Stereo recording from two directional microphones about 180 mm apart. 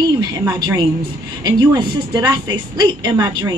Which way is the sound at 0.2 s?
20° right (ahead or behind).